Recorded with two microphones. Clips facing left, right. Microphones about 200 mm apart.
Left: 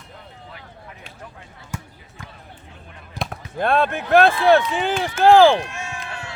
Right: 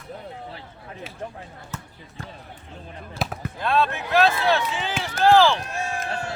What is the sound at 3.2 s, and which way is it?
Basketball bounce, 15° left (ahead or behind).